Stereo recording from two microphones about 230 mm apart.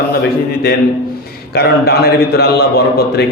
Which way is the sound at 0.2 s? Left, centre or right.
Left.